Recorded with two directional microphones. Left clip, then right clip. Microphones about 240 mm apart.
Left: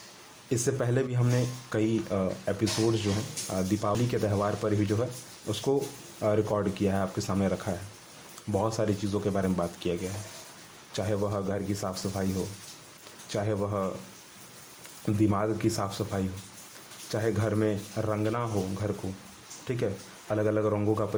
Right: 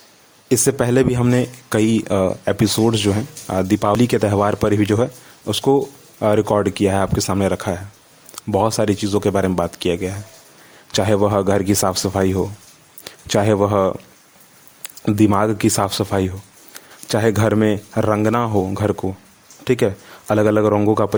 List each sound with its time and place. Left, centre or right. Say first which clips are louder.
0.4 s speech: right 12 dB; right
6.1 s speech: right 11 dB; right
15.0 s speech: right 12 dB; right